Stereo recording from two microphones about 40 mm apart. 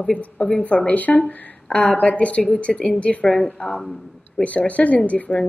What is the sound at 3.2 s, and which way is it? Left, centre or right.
Speech, centre.